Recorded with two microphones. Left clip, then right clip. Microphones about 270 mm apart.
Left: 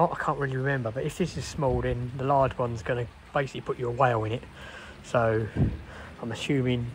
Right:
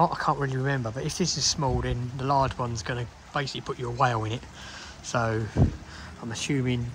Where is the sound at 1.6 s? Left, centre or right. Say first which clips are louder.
Left 2 dB; centre.